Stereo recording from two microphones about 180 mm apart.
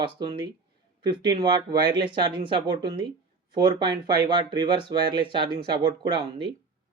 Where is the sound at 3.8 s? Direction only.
25° right (ahead or behind).